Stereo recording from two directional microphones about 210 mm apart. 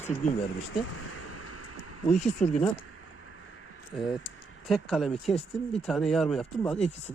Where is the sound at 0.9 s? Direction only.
90° left.